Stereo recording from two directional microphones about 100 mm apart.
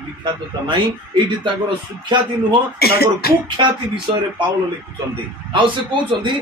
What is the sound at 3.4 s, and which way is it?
Speech, 50° right (ahead or behind).